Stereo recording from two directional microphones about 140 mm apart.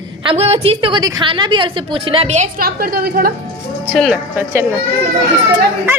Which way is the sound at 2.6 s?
90° right.